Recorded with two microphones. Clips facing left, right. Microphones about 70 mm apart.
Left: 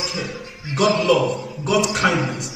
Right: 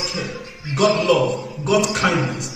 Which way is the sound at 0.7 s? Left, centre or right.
Centre.